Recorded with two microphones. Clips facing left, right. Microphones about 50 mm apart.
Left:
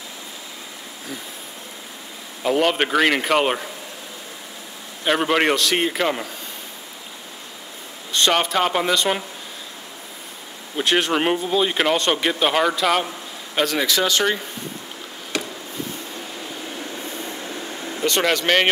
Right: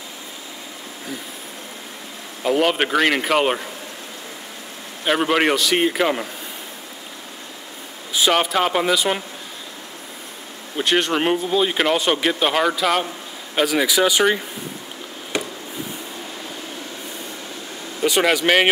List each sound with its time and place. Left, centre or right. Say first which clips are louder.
2.4 s speech: right 1 dB; centre
5.0 s speech: right 1 dB; centre
8.1 s speech: right 1 dB; centre
10.8 s speech: even; centre
15.3 s a sound: right 2 dB; right
18.0 s speech: right 2 dB; centre